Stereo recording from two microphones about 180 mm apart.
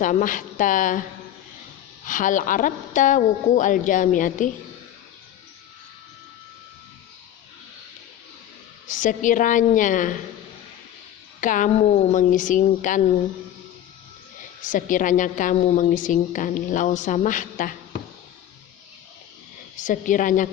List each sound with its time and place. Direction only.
0.0 s a woman's voice: 45° left (ahead or behind)
2.0 s a woman's voice: 45° left (ahead or behind)
8.9 s a woman's voice: 45° left (ahead or behind)
11.3 s a woman's voice: 45° left (ahead or behind)
14.6 s a woman's voice: 45° left (ahead or behind)
19.7 s a woman's voice: 45° left (ahead or behind)